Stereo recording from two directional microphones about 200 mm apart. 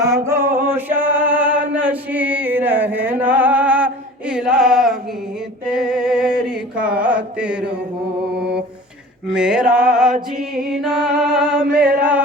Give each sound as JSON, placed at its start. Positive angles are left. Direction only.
{"t": 0.0, "sound": "music", "side_deg": -15}
{"t": 0.3, "sound": "music", "side_deg": -45}
{"t": 0.6, "sound": "male singing", "side_deg": -10}
{"t": 5.6, "sound": "music", "side_deg": -5}
{"t": 9.3, "sound": "music", "side_deg": -5}